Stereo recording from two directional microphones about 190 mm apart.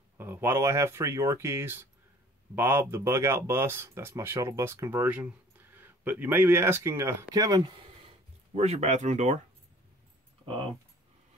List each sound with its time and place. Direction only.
0.2 s speech: 10° right (ahead or behind)
8.5 s speech: 35° right (ahead or behind)